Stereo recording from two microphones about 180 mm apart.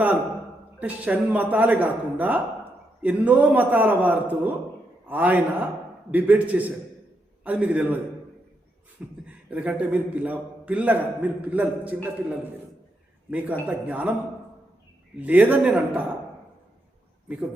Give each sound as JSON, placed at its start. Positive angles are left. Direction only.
{"t": 0.8, "sound": "a man's voice", "side_deg": -10}
{"t": 9.2, "sound": "a man's voice", "side_deg": -5}
{"t": 13.3, "sound": "a man's voice", "side_deg": -10}
{"t": 15.2, "sound": "a man's voice", "side_deg": -10}
{"t": 17.2, "sound": "a man's voice", "side_deg": -5}